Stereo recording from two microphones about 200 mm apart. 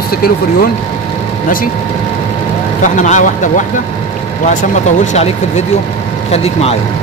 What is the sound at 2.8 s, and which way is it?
Speech, 40° left (ahead or behind).